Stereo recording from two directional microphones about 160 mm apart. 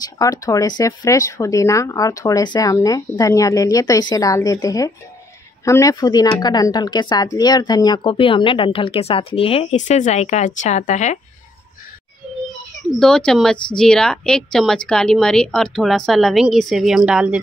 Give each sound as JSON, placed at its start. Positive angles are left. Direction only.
{"t": 0.0, "sound": "speech", "side_deg": 20}
{"t": 13.0, "sound": "a woman's voice", "side_deg": 5}